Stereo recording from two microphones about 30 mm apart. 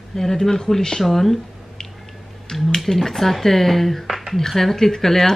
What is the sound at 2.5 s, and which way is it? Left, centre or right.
Speech, centre.